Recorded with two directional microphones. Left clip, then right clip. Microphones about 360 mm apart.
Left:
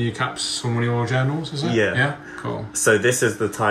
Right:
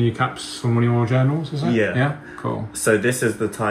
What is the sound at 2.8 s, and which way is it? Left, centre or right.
Speech, left.